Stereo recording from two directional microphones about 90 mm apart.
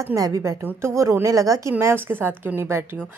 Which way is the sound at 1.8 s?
25° right (ahead or behind).